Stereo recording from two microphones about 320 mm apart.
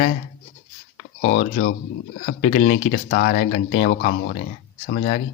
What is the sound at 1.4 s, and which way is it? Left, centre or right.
Speech, left.